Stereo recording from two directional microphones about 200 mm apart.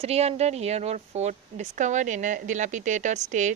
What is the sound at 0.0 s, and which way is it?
Speech, 30° right (ahead or behind).